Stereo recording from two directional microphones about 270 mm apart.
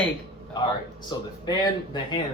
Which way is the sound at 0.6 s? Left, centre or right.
Centre.